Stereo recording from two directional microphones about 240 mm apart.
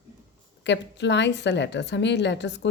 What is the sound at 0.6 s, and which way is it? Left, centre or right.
Speech, left.